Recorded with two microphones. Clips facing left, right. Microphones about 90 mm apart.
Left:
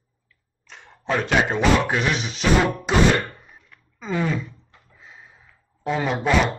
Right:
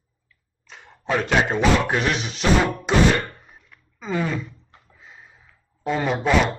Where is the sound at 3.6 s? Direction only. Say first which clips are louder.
Even; centre (ahead or behind).